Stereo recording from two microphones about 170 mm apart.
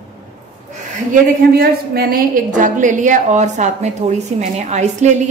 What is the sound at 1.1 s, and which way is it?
A woman's voice, 60° right (ahead or behind).